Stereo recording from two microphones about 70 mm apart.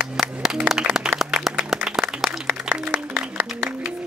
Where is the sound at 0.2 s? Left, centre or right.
Centre.